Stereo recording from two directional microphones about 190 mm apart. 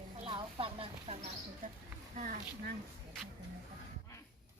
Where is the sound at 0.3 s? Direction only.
30° right (ahead or behind).